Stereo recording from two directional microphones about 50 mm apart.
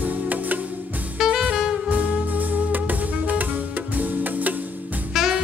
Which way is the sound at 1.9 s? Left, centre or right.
Right.